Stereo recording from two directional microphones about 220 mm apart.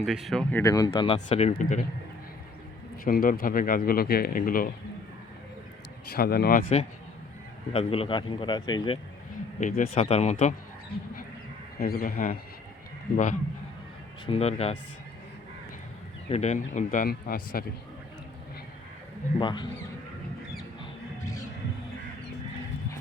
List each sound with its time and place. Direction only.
0.0 s speech: centre (ahead or behind)
0.6 s speech: 15° left (ahead or behind); by 1.8 s 30° left (ahead or behind)
3.0 s speech: 40° left (ahead or behind)
6.1 s speech: 45° left (ahead or behind)
7.7 s speech: 25° left (ahead or behind)
9.6 s speech: 35° left (ahead or behind)
11.8 s speech: 40° left (ahead or behind)
14.3 s speech: 30° left (ahead or behind)
16.3 s speech: 30° left (ahead or behind)
19.4 s speech: 20° left (ahead or behind)